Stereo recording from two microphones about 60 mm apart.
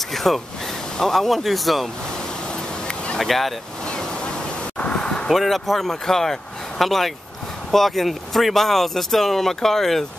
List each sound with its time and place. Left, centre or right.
0.1 s a sound: centre
0.9 s speech: centre
3.2 s speech: centre
3.8 s waves: centre
4.7 s a sound: centre
5.3 s speech: centre